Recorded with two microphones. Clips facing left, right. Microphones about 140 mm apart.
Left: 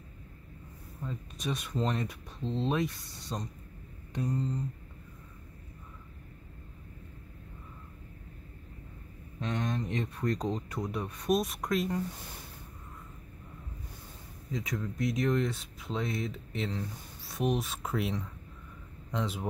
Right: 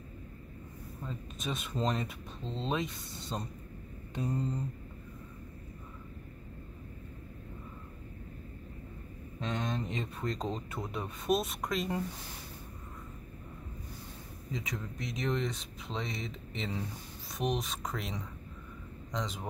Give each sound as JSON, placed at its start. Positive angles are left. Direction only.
{"t": 1.0, "sound": "speech", "side_deg": 0}
{"t": 9.4, "sound": "speech", "side_deg": 0}
{"t": 10.2, "sound": "speech", "side_deg": -25}
{"t": 10.7, "sound": "speech", "side_deg": 0}
{"t": 14.5, "sound": "a man's voice", "side_deg": 0}